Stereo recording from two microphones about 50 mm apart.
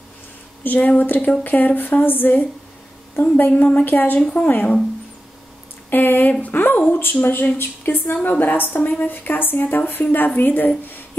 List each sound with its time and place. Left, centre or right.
0.7 s a woman's voice: left
3.4 s a woman's voice: left
3.8 s a woman's voice: left
5.9 s a woman's voice: left